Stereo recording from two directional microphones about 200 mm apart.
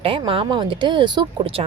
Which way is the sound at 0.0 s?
25° right (ahead or behind).